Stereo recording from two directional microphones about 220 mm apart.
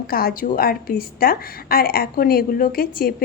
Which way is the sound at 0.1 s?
40° left (ahead or behind).